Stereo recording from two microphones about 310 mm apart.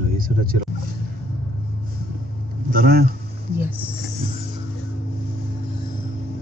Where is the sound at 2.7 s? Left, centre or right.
Right.